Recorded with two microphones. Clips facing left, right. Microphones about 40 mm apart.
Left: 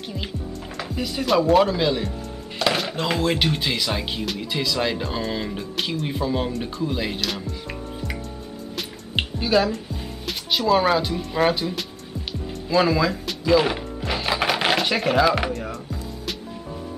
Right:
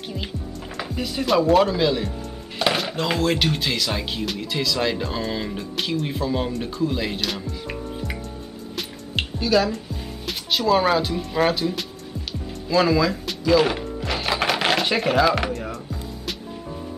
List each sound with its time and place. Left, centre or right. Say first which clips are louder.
0.7 s speech: right 1 dB; centre
9.1 s music: even; centre
10.2 s speech: even; centre
13.4 s music: right 1 dB; centre